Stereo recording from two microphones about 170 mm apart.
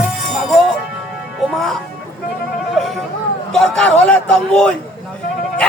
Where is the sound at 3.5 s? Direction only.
5° left (ahead or behind).